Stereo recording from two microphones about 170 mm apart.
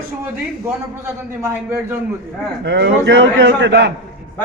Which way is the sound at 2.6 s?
90° right.